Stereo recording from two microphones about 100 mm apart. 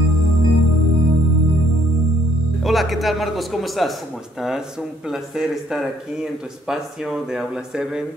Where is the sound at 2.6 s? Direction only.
Centre (ahead or behind).